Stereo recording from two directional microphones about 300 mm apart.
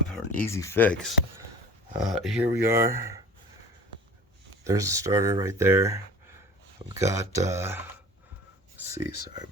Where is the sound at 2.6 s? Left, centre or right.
Right.